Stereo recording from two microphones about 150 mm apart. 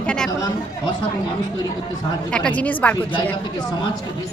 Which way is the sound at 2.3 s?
10° left (ahead or behind).